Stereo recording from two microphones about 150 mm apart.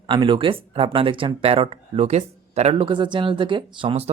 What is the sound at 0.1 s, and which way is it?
Speech, 35° right (ahead or behind).